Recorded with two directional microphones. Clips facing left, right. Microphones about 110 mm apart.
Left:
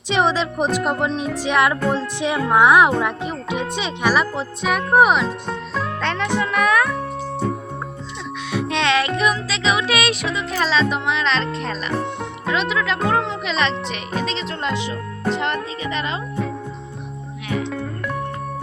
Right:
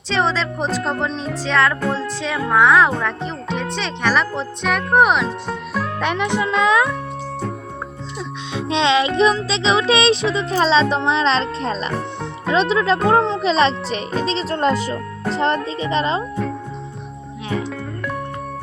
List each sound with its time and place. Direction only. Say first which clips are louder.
0.1 s speech: left 1 dB; 15° left (ahead or behind); by 6.9 s 20° right (ahead or behind)
8.5 s music: right 2 dB; 20° right (ahead or behind)
10.3 s a child's voice: right 4 dB; 30° right (ahead or behind)
11.9 s speech: left 1 dB; centre (ahead or behind)
12.5 s a child's voice: right 5 dB; 30° right (ahead or behind)